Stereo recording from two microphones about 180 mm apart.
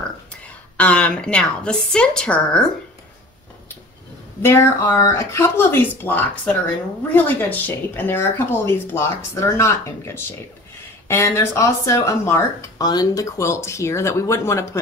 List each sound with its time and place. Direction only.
0.7 s a woman's voice: 5° left (ahead or behind)
4.4 s speech: 15° left (ahead or behind)